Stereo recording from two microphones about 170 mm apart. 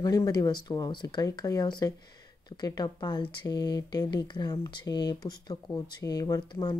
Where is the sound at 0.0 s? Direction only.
20° left (ahead or behind).